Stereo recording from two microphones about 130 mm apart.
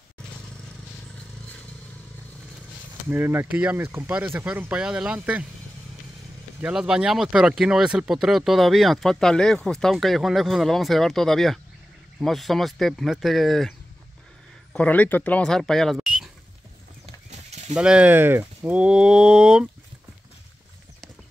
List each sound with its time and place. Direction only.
3.1 s speech: 20° right (ahead or behind)
6.6 s speech: 5° right (ahead or behind)
17.0 s horse: 60° right (ahead or behind)
17.7 s speech: 5° right (ahead or behind)